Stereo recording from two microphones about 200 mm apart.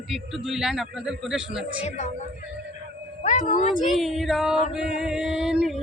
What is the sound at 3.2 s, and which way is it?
Speech, 40° left (ahead or behind).